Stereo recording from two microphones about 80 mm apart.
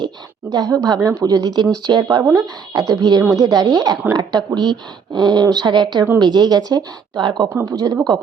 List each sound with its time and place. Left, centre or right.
0.5 s a woman's voice: right
2.3 s a woman's voice: right
7.6 s a woman's voice: right